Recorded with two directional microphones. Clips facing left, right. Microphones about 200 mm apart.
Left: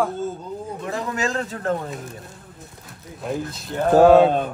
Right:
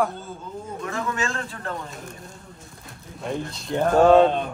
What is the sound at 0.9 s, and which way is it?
Speech, 35° left (ahead or behind).